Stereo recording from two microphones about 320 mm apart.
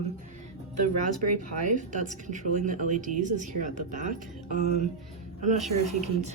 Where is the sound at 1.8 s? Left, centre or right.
Right.